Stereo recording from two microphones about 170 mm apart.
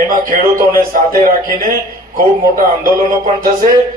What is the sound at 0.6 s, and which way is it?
Speech, 55° right (ahead or behind).